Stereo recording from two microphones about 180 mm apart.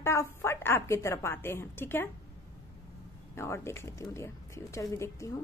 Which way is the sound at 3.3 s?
15° left (ahead or behind).